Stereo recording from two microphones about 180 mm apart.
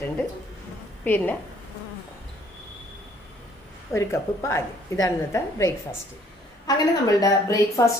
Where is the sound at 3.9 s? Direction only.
15° left (ahead or behind).